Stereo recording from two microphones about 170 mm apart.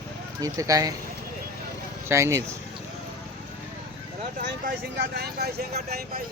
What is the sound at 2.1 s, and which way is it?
Speech, 15° right (ahead or behind).